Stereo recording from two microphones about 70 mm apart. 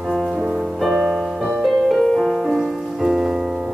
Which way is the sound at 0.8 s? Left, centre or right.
Centre.